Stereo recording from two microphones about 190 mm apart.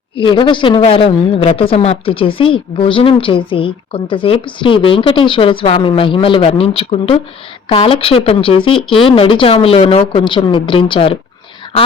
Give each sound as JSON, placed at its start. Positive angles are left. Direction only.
{"t": 0.2, "sound": "a woman's voice", "side_deg": 25}